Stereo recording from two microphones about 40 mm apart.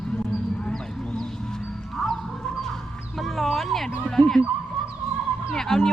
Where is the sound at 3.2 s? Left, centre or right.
Centre.